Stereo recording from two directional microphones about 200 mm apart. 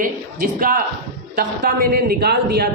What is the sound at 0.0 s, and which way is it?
A man's voice, 45° right (ahead or behind).